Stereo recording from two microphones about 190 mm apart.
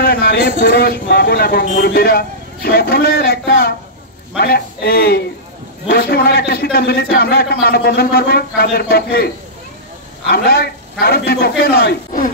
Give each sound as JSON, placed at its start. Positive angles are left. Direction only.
{"t": 0.0, "sound": "speech", "side_deg": 55}